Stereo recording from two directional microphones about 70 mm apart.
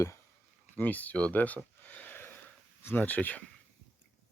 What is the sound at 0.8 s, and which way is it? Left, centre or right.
Speech, left.